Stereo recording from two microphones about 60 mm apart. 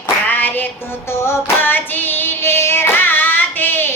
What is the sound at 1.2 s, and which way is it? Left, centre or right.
Music, left.